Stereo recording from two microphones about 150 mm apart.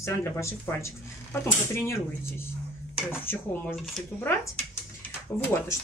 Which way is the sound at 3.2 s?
15° left (ahead or behind).